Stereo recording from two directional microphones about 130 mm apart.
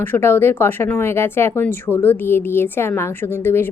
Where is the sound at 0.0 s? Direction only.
15° left (ahead or behind).